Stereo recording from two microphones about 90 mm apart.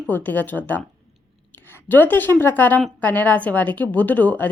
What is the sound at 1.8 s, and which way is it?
A woman's voice, 20° left (ahead or behind).